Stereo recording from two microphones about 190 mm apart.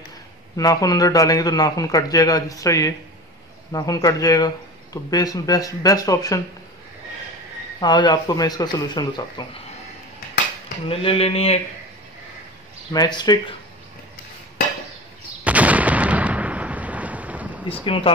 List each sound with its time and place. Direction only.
0.6 s a man's voice: 20° left (ahead or behind)
7.8 s a man's voice: 25° left (ahead or behind)
10.9 s speech: 30° left (ahead or behind)
12.9 s a man's voice: 20° left (ahead or behind)
15.4 s artillery fire: 5° right (ahead or behind)